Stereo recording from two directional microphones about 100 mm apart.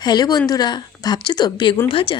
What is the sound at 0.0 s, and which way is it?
Speech, 45° left (ahead or behind).